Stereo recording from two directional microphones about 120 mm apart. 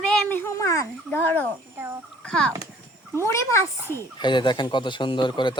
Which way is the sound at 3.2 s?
25° left (ahead or behind).